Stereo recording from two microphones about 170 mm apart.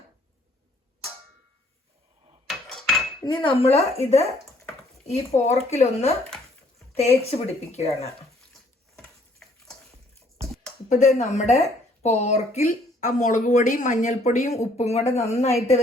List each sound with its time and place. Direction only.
2.5 s a sound: centre (ahead or behind)
3.2 s speech: 25° left (ahead or behind)
5.7 s speech: 40° left (ahead or behind)
10.8 s speech: 45° left (ahead or behind)